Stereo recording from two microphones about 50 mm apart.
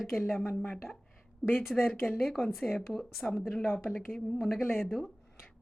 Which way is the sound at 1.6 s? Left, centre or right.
Centre.